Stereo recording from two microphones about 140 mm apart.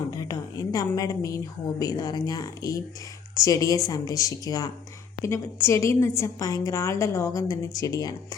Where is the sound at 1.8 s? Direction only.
25° left (ahead or behind).